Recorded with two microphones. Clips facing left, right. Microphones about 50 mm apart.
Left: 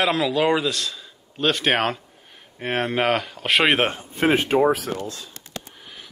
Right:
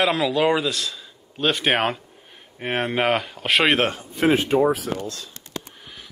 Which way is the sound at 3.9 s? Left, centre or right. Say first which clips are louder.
Right 1 dB; left.